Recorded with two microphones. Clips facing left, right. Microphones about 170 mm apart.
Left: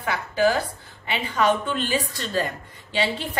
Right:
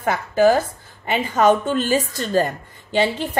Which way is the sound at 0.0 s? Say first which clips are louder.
Right 5 dB; 45° right (ahead or behind).